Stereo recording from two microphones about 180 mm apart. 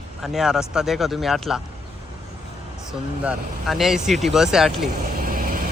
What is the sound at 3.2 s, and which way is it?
Speech, 5° right (ahead or behind).